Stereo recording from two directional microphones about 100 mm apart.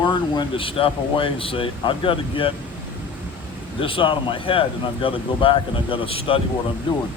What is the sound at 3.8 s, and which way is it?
Speech, 60° left (ahead or behind).